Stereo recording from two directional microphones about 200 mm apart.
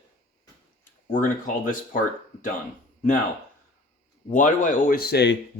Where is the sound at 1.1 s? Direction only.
40° left (ahead or behind).